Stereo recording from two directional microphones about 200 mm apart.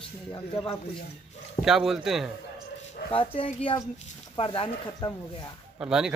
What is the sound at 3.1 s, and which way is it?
A woman's voice, 25° left (ahead or behind).